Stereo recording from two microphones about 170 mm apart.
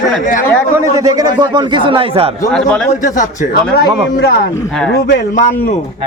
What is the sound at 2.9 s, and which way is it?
Speech, 50° left (ahead or behind).